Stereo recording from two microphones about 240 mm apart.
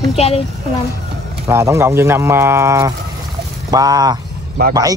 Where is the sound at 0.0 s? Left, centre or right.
Left.